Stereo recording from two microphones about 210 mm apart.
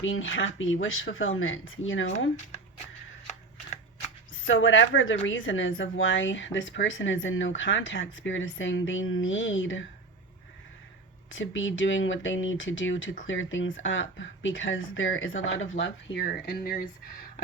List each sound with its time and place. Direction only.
0.0 s speech: 70° left (ahead or behind)
4.4 s a woman's voice: 70° left (ahead or behind)
11.3 s a woman's voice: 65° left (ahead or behind)
15.8 s speech: 55° left (ahead or behind)